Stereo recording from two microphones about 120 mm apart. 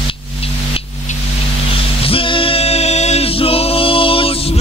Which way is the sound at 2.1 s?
50° left (ahead or behind).